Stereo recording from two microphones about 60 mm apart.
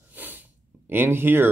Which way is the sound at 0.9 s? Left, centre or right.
Right.